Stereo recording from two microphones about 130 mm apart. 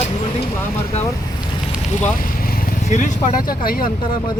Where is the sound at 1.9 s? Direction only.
65° left (ahead or behind).